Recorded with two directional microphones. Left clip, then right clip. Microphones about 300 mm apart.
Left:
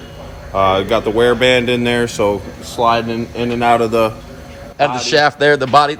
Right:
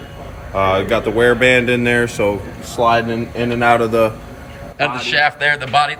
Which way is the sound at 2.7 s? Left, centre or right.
Centre.